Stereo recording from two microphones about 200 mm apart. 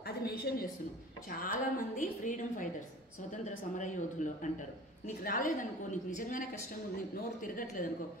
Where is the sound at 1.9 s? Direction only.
40° left (ahead or behind).